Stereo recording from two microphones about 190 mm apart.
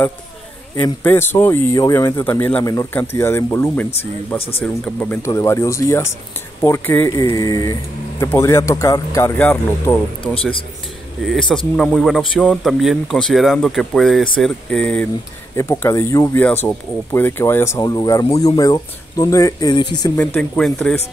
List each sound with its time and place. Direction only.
0.7 s speech: 10° left (ahead or behind)
4.4 s speech: 30° left (ahead or behind)
4.8 s a man's voice: 10° left (ahead or behind)
20.2 s speech: 10° left (ahead or behind)